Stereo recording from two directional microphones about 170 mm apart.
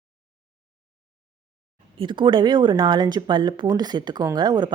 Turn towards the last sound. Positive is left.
turn(degrees=-25)  # may be behind; listen again after turning